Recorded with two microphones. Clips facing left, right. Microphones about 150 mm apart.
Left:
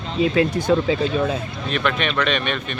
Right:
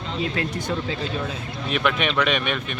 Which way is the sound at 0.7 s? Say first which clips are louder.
Left 8 dB; 60° left (ahead or behind).